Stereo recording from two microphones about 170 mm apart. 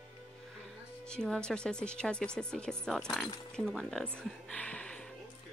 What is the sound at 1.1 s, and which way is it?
Speech, 5° left (ahead or behind).